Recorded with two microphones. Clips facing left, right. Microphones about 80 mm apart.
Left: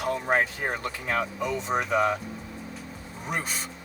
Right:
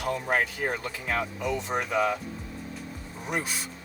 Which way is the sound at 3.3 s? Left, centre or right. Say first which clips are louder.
Right 1 dB; centre.